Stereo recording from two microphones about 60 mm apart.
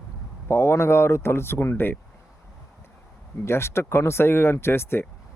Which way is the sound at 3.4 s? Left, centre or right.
Left.